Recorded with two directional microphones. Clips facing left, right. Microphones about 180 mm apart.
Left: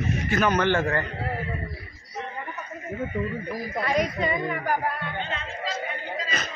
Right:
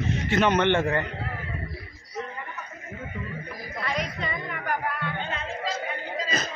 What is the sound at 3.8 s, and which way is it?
A woman's voice, 45° left (ahead or behind).